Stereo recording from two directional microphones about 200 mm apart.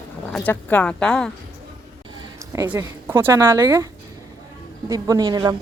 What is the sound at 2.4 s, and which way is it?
Speech, 15° right (ahead or behind).